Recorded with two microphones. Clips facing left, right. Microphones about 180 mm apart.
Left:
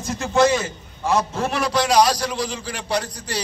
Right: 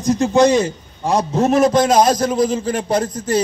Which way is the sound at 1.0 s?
35° right (ahead or behind).